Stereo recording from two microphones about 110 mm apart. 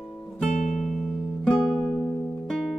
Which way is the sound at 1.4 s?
10° left (ahead or behind).